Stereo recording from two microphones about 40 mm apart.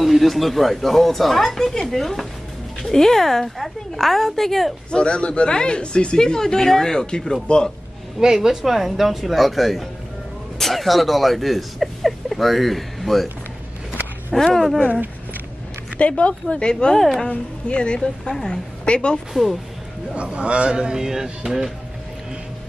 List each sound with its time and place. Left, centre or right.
0.0 s speech: centre
4.9 s speech: left
8.4 s speech: centre
14.3 s speech: centre
16.0 s speech: left
16.4 s speech: left
16.9 s speech: centre
17.3 s a woman's voice: left
19.4 s speech: centre
20.2 s a man's voice: right; by 21.7 s centre